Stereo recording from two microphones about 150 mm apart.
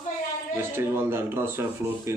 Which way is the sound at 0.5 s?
15° right (ahead or behind).